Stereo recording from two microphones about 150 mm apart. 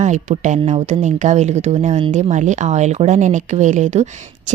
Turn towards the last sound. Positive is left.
turn(degrees=-50)  # may be behind; listen again after turning